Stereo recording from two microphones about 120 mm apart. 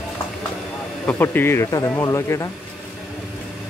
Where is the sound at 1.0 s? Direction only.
15° left (ahead or behind).